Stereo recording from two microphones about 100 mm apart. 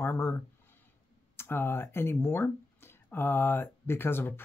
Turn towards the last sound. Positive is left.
turn(degrees=20)  # may be behind; listen again after turning